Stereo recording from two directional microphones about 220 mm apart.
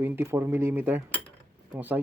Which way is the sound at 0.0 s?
10° right (ahead or behind).